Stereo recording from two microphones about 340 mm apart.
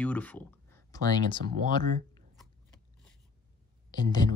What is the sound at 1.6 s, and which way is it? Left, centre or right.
Speech, right.